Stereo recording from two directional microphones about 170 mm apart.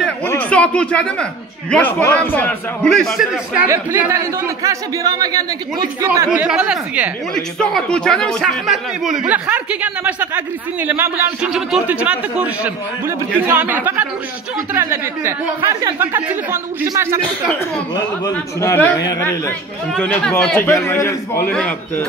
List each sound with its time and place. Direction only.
0.3 s a sound: 10° left (ahead or behind)
1.7 s a man's voice: 10° left (ahead or behind)
3.6 s a man's voice: 15° right (ahead or behind)
6.3 s speech: 5° right (ahead or behind)
18.3 s a man's voice: 15° left (ahead or behind)
19.9 s a man's voice: 5° left (ahead or behind)